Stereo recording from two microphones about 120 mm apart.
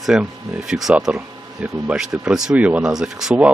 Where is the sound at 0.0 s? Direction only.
5° right (ahead or behind).